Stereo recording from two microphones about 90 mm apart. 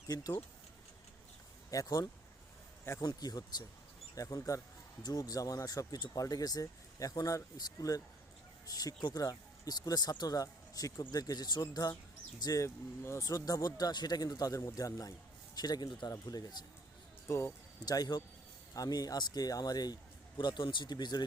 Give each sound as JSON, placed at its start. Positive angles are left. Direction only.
{"t": 0.1, "sound": "speech", "side_deg": 40}
{"t": 1.7, "sound": "speech", "side_deg": 40}
{"t": 17.2, "sound": "speech", "side_deg": 30}
{"t": 17.8, "sound": "speech", "side_deg": 45}